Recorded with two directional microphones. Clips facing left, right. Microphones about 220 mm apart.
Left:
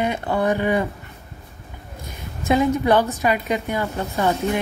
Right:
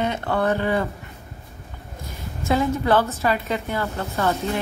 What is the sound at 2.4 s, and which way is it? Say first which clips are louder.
A woman's voice: left 3 dB; 15° left (ahead or behind).